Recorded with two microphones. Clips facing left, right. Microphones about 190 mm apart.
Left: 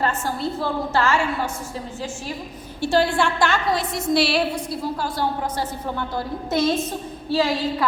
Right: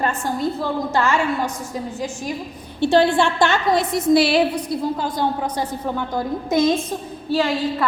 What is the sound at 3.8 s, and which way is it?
Speech, centre (ahead or behind).